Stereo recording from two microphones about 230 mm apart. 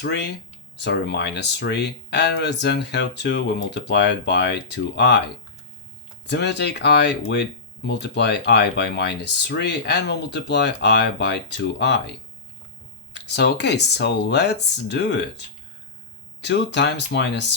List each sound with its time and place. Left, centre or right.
0.0 s speech: left
6.3 s speech: left
13.1 s speech: left
16.4 s speech: left